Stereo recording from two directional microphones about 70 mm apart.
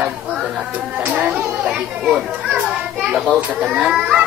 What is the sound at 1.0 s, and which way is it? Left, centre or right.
Chatter, right.